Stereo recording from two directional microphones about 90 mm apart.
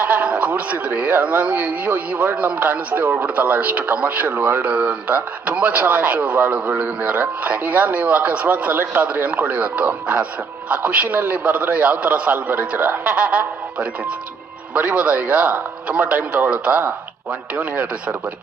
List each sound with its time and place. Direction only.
0.0 s speech: 20° right (ahead or behind)
4.6 s speech: 15° right (ahead or behind)